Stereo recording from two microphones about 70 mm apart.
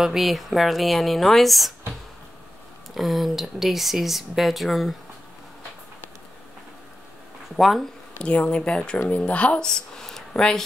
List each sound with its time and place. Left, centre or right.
0.0 s speech: centre
2.9 s speech: centre
7.5 s speech: centre
8.2 s speech: centre